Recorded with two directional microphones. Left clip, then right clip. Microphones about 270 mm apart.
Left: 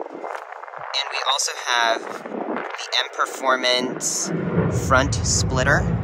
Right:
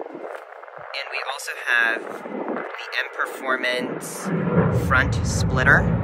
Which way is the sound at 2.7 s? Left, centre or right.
Centre.